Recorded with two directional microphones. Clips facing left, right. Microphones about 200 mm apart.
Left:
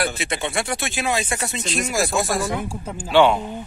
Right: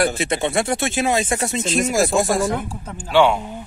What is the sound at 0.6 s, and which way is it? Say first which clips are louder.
Speech: right 5 dB; 25° right (ahead or behind).